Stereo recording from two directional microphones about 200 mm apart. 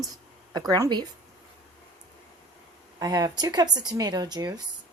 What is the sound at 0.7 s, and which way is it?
Speech, 20° right (ahead or behind).